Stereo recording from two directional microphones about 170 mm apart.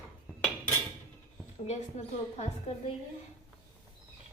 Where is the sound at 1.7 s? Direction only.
40° left (ahead or behind).